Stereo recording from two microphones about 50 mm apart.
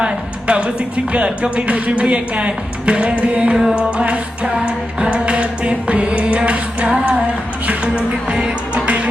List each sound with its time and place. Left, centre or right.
0.0 s a sound: centre
1.1 s speech: right
3.8 s music: right